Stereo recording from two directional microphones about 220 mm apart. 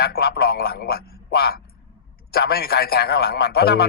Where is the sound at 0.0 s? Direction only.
45° left (ahead or behind).